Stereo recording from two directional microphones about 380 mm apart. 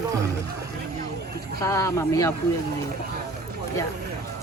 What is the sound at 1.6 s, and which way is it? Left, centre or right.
Speech, centre.